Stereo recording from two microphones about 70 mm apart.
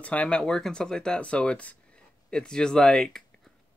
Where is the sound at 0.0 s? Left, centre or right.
Centre.